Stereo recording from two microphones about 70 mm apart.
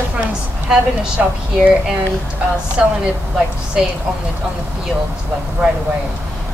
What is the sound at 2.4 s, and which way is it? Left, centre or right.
A woman's voice, centre.